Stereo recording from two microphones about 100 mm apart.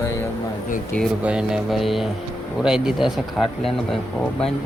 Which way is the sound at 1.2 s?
10° right (ahead or behind).